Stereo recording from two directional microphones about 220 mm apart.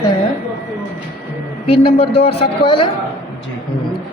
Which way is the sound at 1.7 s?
25° left (ahead or behind).